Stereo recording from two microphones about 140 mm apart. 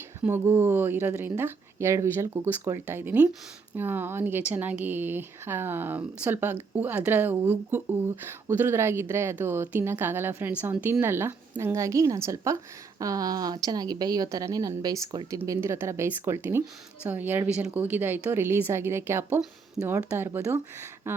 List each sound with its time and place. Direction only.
0.2 s a woman's voice: 15° right (ahead or behind)
19.4 s speech: 5° right (ahead or behind)
19.9 s speech: 15° right (ahead or behind)